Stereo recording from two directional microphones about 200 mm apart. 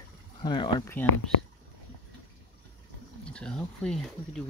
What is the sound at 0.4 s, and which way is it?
Speech, 20° left (ahead or behind).